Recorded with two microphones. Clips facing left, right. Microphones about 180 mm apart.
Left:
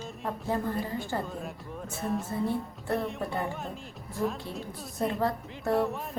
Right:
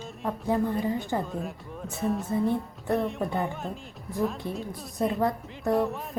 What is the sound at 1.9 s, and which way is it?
Speech, centre (ahead or behind).